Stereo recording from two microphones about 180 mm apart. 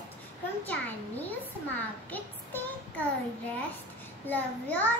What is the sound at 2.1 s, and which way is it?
Child singing, 10° left (ahead or behind).